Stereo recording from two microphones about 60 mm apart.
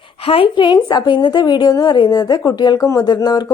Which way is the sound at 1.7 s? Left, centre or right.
Left.